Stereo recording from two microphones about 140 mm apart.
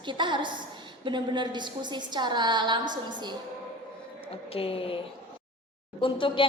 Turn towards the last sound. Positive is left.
turn(degrees=40)  # may be behind; listen again after turning